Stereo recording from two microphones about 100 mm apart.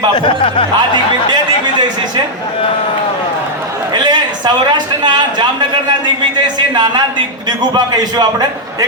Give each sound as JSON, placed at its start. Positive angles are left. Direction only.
{"t": 0.1, "sound": "speech", "side_deg": 55}
{"t": 3.9, "sound": "a sound", "side_deg": -45}
{"t": 8.1, "sound": "a man's voice", "side_deg": -45}